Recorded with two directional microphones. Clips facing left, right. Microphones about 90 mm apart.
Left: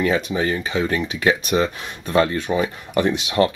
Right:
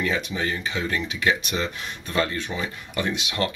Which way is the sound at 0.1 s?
35° left (ahead or behind).